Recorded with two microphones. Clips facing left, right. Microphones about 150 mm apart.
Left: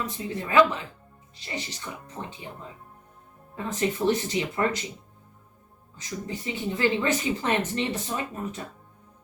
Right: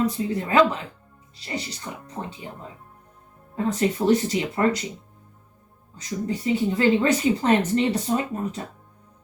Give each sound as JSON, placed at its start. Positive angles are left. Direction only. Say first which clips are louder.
{"t": 0.0, "sound": "speech", "louder": "right 8 dB", "side_deg": -35}
{"t": 3.5, "sound": "speech", "louder": "right 5 dB", "side_deg": -35}
{"t": 6.2, "sound": "speech", "louder": "right 9 dB", "side_deg": -35}